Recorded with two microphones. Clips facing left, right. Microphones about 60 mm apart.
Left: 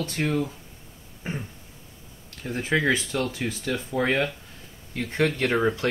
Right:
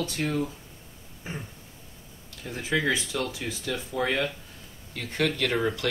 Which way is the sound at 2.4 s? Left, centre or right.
Left.